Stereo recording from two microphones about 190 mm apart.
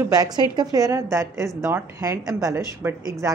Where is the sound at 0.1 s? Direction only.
20° right (ahead or behind).